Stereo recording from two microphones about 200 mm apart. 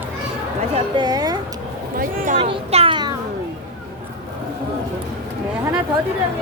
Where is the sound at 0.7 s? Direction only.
20° right (ahead or behind).